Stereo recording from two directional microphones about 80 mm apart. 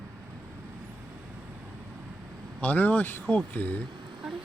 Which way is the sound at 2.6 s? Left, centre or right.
Left.